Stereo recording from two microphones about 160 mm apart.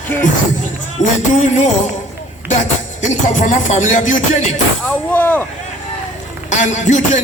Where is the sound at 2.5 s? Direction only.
50° left (ahead or behind).